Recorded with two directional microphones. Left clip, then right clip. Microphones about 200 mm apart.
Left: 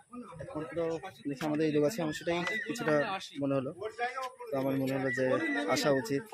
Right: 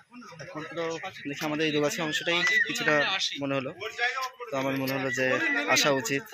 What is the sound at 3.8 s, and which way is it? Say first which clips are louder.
Speech: right 6 dB; 15° left (ahead or behind).